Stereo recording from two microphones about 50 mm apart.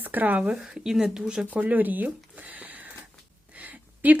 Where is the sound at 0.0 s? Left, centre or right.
Right.